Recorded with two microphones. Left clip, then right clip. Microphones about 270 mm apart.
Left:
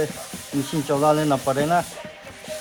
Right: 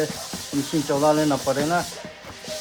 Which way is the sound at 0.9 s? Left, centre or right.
Left.